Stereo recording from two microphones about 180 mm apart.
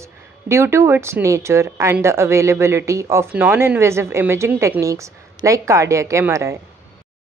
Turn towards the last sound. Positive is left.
turn(degrees=-15)  # may be behind; listen again after turning